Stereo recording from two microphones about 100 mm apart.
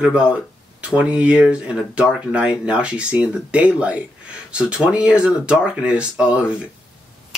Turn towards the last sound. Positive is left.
turn(degrees=-10)  # may be behind; listen again after turning